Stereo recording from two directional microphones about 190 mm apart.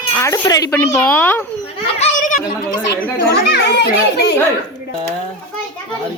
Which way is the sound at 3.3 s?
60° left (ahead or behind).